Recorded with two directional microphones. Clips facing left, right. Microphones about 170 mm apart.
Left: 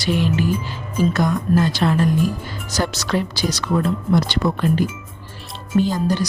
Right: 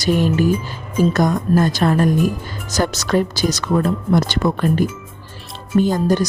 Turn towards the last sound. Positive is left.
turn(degrees=-50)  # may be behind; listen again after turning